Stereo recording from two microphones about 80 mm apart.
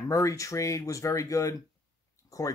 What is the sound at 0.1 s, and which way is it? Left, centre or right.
Speech, left.